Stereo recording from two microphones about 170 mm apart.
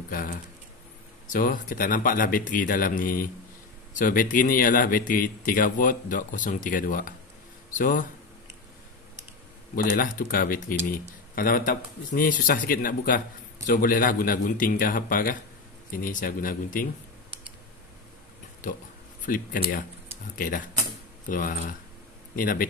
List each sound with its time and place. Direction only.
0.1 s speech: 55° left (ahead or behind)
9.9 s speech: 55° left (ahead or behind)
19.2 s speech: 55° left (ahead or behind)